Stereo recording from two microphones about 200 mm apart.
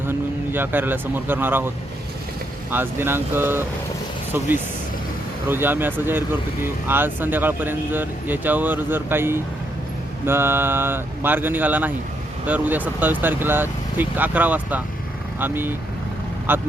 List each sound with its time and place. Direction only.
0.1 s speech: 10° right (ahead or behind)
5.5 s speech: 10° right (ahead or behind)